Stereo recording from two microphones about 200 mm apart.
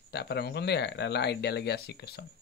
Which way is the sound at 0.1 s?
55° left (ahead or behind).